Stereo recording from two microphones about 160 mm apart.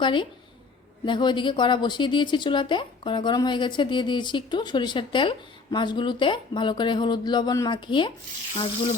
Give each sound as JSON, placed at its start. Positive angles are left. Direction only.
{"t": 0.0, "sound": "a woman's voice", "side_deg": 30}